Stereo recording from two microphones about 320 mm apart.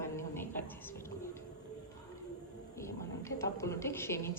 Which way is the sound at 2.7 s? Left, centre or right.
Centre.